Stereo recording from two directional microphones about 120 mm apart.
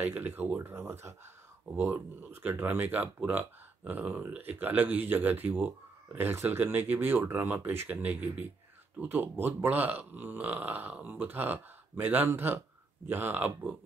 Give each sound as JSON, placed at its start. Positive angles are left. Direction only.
{"t": 0.1, "sound": "speech", "side_deg": -15}